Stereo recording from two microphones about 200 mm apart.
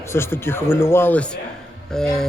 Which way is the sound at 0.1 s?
10° left (ahead or behind).